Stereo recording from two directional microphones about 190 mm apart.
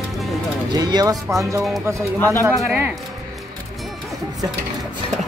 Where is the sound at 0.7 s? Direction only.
20° right (ahead or behind).